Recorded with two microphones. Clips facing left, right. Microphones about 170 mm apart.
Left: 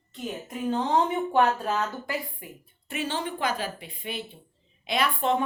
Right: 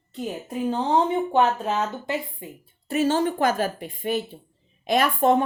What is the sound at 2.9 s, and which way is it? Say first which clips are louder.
A woman's voice: right 9 dB; 45° right (ahead or behind).